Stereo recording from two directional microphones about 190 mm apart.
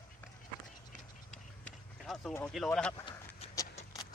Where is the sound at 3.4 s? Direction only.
30° left (ahead or behind).